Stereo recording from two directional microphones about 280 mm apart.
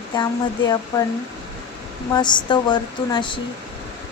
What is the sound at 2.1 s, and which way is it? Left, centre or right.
A woman's voice, centre.